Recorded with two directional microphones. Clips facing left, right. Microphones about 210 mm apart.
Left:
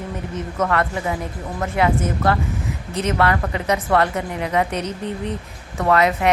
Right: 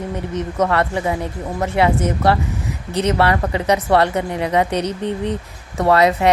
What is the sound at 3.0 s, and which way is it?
A woman's voice, 30° right (ahead or behind).